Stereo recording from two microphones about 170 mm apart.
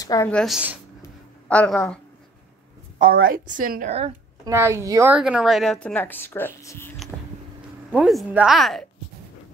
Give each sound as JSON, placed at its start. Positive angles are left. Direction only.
{"t": 0.0, "sound": "a woman's voice", "side_deg": 20}
{"t": 0.3, "sound": "speech", "side_deg": 5}
{"t": 3.0, "sound": "a woman's voice", "side_deg": -60}
{"t": 4.5, "sound": "a woman's voice", "side_deg": -15}
{"t": 5.1, "sound": "speech", "side_deg": -5}
{"t": 7.9, "sound": "speech", "side_deg": -5}